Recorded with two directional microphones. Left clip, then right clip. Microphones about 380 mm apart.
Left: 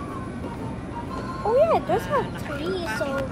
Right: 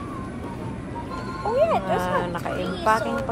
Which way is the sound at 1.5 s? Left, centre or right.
Left.